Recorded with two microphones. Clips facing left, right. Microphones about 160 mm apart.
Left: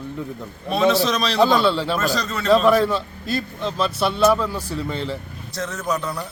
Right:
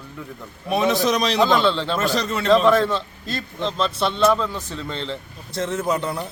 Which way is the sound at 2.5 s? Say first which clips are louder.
Left 1 dB; 10° left (ahead or behind).